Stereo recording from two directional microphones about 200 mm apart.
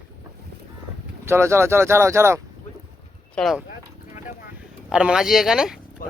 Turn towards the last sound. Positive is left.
turn(degrees=45)  # may be behind; listen again after turning